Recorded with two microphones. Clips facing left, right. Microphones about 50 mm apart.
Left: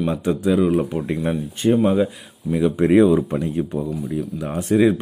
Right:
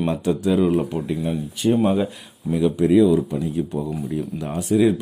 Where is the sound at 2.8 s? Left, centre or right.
Left.